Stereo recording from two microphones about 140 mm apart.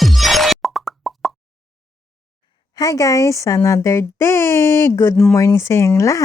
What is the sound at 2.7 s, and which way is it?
Speech, 25° left (ahead or behind).